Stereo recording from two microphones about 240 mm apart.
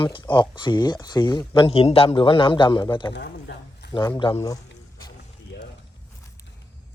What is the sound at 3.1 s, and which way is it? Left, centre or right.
Speech, left.